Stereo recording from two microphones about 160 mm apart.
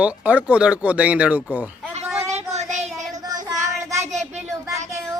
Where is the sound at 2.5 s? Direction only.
45° right (ahead or behind).